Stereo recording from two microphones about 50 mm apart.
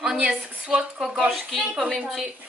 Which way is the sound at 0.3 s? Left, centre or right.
Centre.